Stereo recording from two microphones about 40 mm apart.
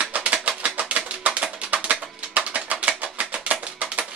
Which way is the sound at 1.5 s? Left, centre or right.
Right.